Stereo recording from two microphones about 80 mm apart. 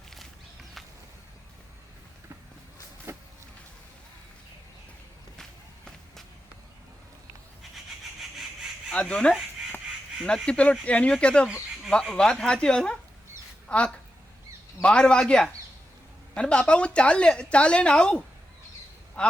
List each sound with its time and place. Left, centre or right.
3.1 s a sound: right
5.4 s walk: centre
8.9 s a woman's voice: centre